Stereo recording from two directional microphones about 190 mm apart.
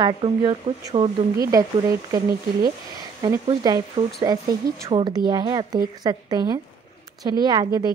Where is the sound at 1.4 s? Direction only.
15° right (ahead or behind).